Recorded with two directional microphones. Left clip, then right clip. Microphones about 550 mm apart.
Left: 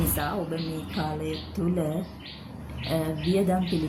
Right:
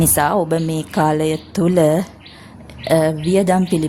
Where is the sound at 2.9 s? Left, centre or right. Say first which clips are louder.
Right 12 dB; centre.